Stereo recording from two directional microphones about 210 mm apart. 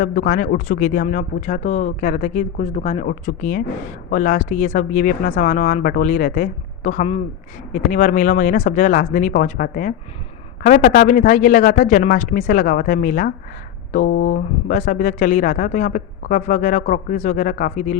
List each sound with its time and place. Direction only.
0.0 s speech: 40° left (ahead or behind)
3.1 s speech: 40° left (ahead or behind)